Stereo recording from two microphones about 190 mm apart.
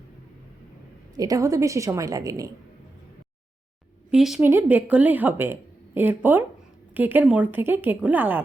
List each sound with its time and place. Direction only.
1.1 s speech: 20° right (ahead or behind)
4.1 s speech: 5° right (ahead or behind)